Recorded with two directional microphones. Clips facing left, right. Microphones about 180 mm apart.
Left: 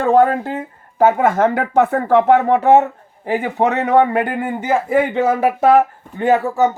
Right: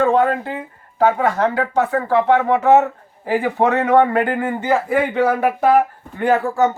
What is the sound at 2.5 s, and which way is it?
Speech, 30° left (ahead or behind).